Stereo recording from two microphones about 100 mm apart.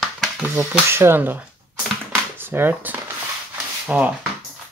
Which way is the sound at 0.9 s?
25° right (ahead or behind).